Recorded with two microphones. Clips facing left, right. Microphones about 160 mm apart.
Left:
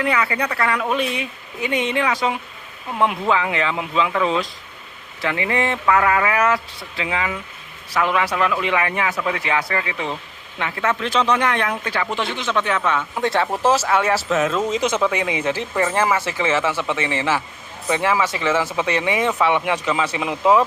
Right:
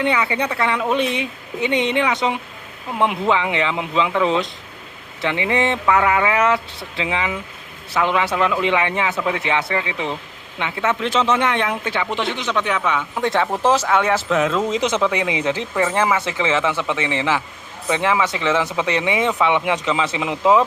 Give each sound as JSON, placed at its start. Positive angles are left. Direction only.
{"t": 0.0, "sound": "a woman's voice", "side_deg": -25}
{"t": 13.6, "sound": "speech", "side_deg": 10}
{"t": 14.6, "sound": "a woman's voice", "side_deg": -20}